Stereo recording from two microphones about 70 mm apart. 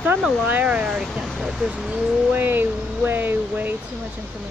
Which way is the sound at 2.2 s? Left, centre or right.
Right.